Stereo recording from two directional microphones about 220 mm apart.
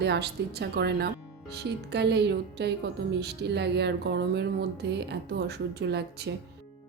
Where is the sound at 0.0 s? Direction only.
45° right (ahead or behind).